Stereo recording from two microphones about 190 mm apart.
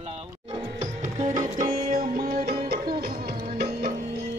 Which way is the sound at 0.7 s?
40° right (ahead or behind).